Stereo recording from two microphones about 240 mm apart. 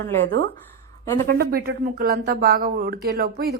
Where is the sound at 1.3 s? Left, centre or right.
Right.